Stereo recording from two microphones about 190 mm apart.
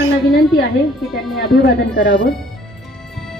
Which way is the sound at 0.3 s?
55° left (ahead or behind).